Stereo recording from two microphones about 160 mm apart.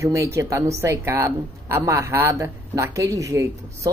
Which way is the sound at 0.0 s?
20° right (ahead or behind).